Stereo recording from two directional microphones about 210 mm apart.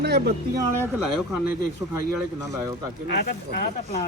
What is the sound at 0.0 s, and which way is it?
Speech, 50° right (ahead or behind).